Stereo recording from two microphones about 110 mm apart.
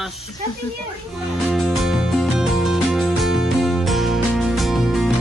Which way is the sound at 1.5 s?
Centre (ahead or behind).